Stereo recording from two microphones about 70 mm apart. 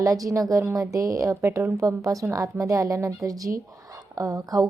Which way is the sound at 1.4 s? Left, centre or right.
Right.